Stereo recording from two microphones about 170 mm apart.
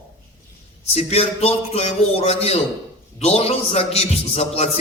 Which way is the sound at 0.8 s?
35° left (ahead or behind).